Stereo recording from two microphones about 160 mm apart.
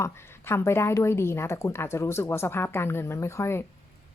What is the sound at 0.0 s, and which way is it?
Speech, 15° left (ahead or behind).